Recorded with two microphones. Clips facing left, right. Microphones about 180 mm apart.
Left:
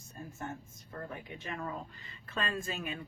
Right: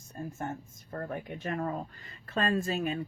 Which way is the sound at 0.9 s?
50° right (ahead or behind).